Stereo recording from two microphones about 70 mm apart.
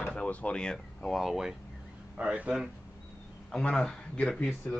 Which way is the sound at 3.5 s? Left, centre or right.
Centre.